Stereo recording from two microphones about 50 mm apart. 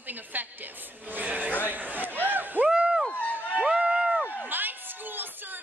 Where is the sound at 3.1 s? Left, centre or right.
Left.